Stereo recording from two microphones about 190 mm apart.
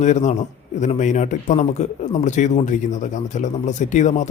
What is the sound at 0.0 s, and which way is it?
Speech, 40° left (ahead or behind).